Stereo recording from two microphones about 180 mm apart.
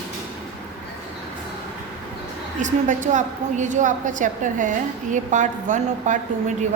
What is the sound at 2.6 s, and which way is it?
A woman's voice, 45° right (ahead or behind).